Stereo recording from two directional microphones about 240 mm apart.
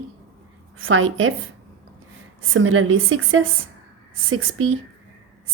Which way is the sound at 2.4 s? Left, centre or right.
Right.